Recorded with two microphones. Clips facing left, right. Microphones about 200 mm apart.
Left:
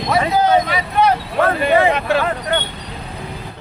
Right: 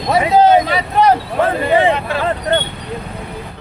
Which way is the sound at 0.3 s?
25° right (ahead or behind).